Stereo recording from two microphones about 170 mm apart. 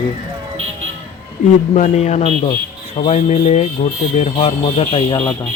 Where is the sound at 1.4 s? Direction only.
45° left (ahead or behind); by 5.3 s 25° left (ahead or behind).